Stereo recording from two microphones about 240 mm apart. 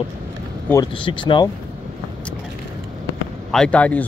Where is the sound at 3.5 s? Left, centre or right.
Centre.